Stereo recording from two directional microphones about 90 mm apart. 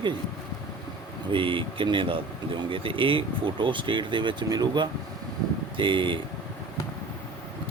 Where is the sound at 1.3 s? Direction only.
70° right (ahead or behind); by 4.9 s 55° right (ahead or behind).